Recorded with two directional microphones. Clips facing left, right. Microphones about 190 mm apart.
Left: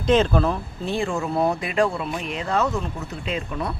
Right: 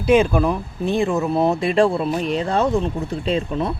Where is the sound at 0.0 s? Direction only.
10° right (ahead or behind).